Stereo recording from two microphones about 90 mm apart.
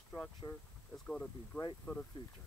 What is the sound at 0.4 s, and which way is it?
Speech, 40° left (ahead or behind).